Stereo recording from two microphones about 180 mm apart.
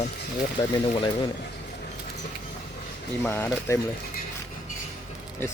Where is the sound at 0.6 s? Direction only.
25° left (ahead or behind).